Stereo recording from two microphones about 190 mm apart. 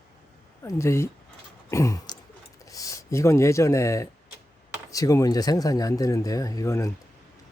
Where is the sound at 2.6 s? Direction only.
20° left (ahead or behind).